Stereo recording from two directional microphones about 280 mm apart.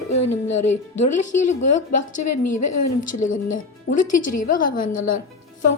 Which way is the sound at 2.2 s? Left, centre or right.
Left.